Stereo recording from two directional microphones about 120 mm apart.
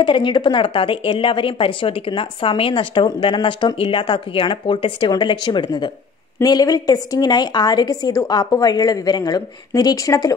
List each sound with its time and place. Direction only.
0.0 s a woman's voice: 40° left (ahead or behind)